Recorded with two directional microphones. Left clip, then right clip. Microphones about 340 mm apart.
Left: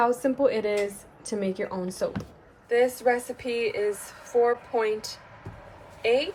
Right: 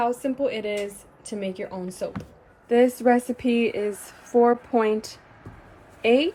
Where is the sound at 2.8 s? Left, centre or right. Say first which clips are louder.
Right 4 dB; centre.